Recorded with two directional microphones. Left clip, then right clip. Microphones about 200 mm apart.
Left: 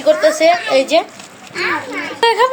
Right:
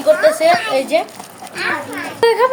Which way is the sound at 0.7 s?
20° left (ahead or behind).